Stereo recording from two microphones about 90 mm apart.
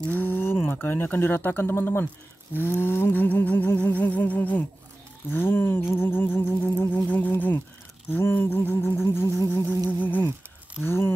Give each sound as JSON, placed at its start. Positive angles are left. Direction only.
{"t": 0.0, "sound": "speech", "side_deg": 20}
{"t": 2.8, "sound": "music", "side_deg": 25}
{"t": 7.1, "sound": "a sound", "side_deg": 20}
{"t": 8.1, "sound": "music", "side_deg": 25}
{"t": 9.8, "sound": "humming", "side_deg": 20}
{"t": 10.8, "sound": "music", "side_deg": 25}